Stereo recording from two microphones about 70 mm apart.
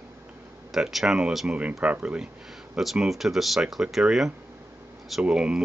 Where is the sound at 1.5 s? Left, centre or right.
Centre.